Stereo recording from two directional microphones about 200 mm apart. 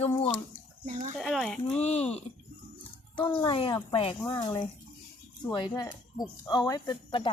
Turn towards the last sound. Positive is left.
turn(degrees=20)  # may be behind; listen again after turning